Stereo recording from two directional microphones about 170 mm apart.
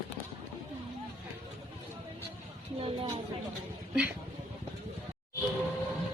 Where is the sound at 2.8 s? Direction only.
30° right (ahead or behind).